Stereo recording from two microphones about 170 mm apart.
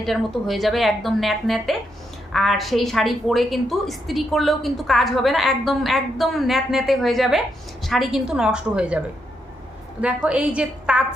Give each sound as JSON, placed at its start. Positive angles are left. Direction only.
{"t": 0.0, "sound": "a woman's voice", "side_deg": 0}
{"t": 10.2, "sound": "a woman's voice", "side_deg": -5}